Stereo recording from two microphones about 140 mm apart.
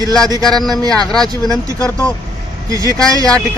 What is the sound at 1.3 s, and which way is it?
Speech, 25° right (ahead or behind).